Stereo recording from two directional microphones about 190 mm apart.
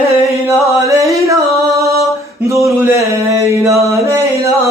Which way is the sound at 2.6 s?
15° right (ahead or behind).